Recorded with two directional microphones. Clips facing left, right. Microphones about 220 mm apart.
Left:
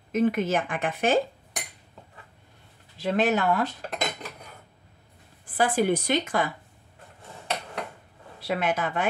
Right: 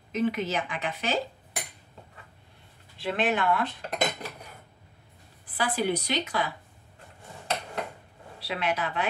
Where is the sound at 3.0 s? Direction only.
40° left (ahead or behind).